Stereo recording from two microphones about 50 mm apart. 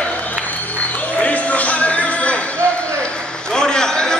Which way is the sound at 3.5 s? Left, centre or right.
Centre.